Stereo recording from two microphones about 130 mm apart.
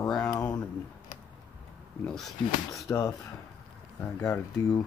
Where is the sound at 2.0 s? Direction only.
5° left (ahead or behind).